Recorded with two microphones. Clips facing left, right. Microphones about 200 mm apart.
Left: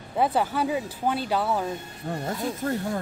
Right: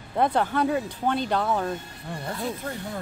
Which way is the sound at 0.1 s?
5° left (ahead or behind).